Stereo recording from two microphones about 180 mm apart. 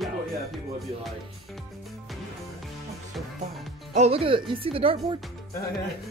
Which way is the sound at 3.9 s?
35° right (ahead or behind).